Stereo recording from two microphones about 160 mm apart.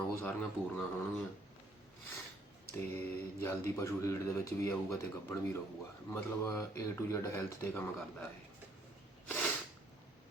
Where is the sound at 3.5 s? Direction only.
15° left (ahead or behind).